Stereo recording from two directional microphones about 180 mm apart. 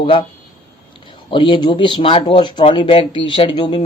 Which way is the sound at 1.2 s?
25° left (ahead or behind).